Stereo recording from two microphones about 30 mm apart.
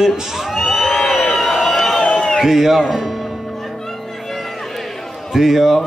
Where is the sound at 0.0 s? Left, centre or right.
Centre.